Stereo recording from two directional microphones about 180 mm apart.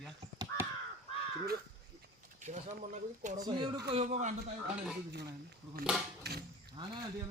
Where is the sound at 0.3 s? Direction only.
15° right (ahead or behind).